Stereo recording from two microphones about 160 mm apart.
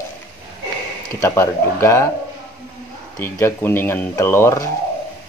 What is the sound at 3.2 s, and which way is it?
Speech, 15° left (ahead or behind).